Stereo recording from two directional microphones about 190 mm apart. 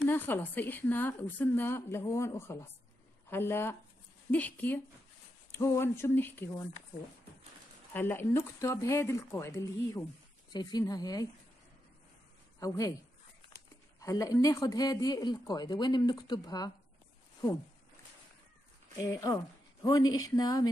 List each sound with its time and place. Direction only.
0.1 s a woman's voice: 10° left (ahead or behind)
7.9 s a woman's voice: 10° left (ahead or behind)
12.5 s speech: 15° left (ahead or behind)
13.9 s speech: 15° left (ahead or behind)
18.9 s speech: 20° left (ahead or behind)